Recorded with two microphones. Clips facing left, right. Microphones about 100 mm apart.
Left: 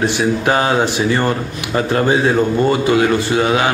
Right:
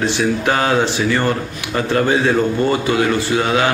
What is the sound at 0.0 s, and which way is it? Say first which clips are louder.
A man's voice: left 1 dB; 15° left (ahead or behind).